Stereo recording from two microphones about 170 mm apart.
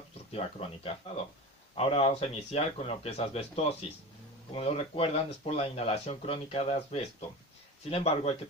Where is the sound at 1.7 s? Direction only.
35° left (ahead or behind).